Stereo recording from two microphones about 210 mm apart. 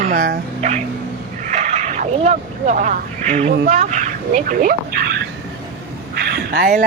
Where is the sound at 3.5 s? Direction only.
35° right (ahead or behind).